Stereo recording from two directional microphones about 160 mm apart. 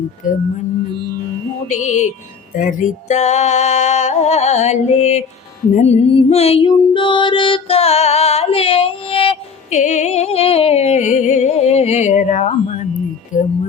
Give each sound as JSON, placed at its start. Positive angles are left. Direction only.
{"t": 0.2, "sound": "speech", "side_deg": 55}
{"t": 1.7, "sound": "music", "side_deg": 50}
{"t": 5.7, "sound": "female singing", "side_deg": 40}
{"t": 13.3, "sound": "speech", "side_deg": 55}